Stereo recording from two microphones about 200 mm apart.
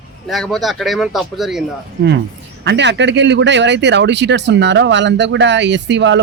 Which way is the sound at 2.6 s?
60° right (ahead or behind).